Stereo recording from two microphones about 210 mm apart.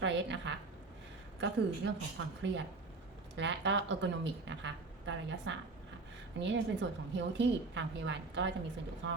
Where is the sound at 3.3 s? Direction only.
60° right (ahead or behind).